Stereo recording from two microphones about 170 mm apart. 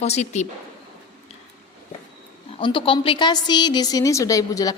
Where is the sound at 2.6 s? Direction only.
30° left (ahead or behind).